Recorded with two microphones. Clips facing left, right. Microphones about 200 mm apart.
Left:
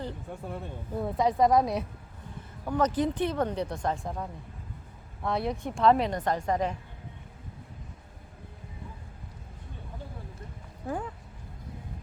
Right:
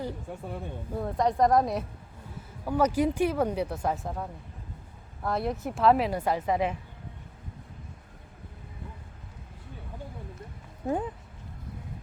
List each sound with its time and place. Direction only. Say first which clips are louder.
0.0 s speech: right 2 dB; centre (ahead or behind)
10.8 s speech: right 4 dB; 20° right (ahead or behind)